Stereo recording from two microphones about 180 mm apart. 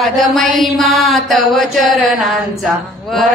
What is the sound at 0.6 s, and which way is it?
Mantra, centre (ahead or behind).